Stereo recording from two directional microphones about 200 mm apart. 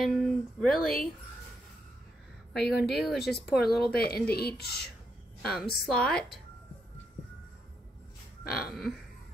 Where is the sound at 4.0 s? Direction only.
50° left (ahead or behind).